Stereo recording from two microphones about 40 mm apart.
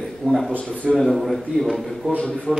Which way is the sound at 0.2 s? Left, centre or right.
Right.